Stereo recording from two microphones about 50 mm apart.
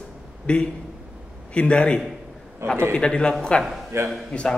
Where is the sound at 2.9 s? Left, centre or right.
Left.